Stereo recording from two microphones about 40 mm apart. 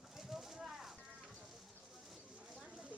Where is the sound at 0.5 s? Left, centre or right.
Centre.